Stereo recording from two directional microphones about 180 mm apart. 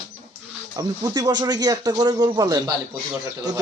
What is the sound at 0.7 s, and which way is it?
Speech, 20° right (ahead or behind).